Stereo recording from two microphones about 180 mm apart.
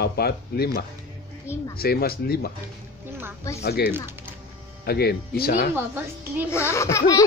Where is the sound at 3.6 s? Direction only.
60° left (ahead or behind).